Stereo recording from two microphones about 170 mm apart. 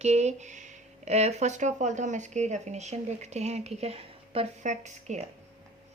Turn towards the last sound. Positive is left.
turn(degrees=-45)  # may be behind; listen again after turning